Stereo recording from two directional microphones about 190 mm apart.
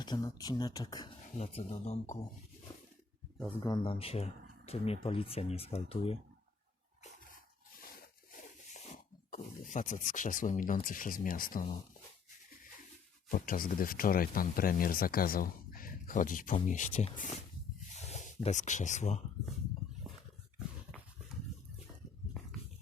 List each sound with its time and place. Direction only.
0.0 s speech: 20° left (ahead or behind)
1.4 s speech: 35° left (ahead or behind)
3.6 s speech: 25° left (ahead or behind)
8.7 s speech: 40° left (ahead or behind)
13.3 s speech: 45° left (ahead or behind)
17.9 s a sound: 35° left (ahead or behind)
18.4 s speech: 40° left (ahead or behind)